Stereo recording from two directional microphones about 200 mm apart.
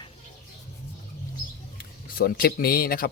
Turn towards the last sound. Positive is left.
turn(degrees=50)  # may be behind; listen again after turning